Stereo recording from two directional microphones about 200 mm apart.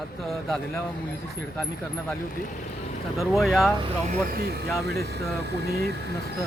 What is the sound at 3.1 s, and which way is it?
Speech, centre (ahead or behind).